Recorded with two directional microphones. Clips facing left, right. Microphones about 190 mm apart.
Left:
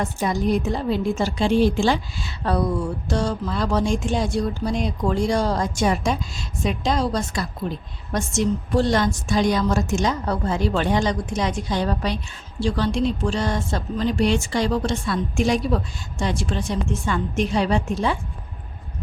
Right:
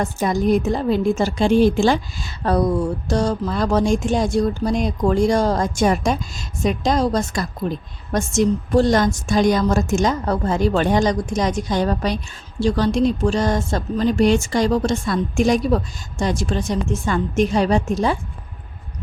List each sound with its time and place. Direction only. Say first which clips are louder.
0.0 s a woman's voice: right 3 dB; 45° right (ahead or behind)